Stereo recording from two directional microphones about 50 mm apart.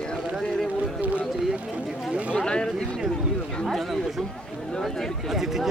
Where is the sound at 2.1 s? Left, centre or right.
Right.